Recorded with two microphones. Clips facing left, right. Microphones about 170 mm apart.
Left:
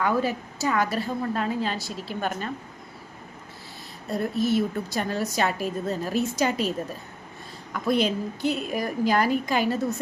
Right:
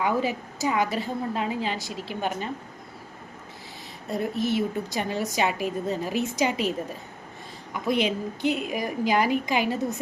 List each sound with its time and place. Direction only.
0.0 s a woman's voice: 15° right (ahead or behind)
4.1 s a woman's voice: 15° right (ahead or behind)